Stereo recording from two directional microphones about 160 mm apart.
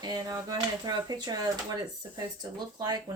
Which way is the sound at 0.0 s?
25° right (ahead or behind).